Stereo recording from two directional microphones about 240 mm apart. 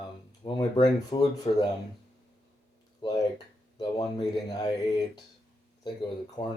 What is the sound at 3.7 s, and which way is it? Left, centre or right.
Speech, centre.